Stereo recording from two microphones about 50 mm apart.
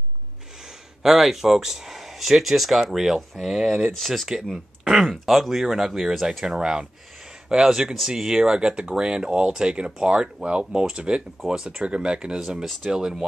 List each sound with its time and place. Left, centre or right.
1.0 s speech: centre
4.4 s speech: centre